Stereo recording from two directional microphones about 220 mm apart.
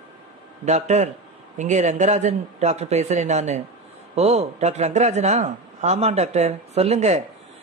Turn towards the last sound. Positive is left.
turn(degrees=-30)  # may be behind; listen again after turning